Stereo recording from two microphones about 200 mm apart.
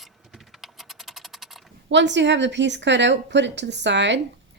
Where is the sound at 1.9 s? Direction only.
60° right (ahead or behind).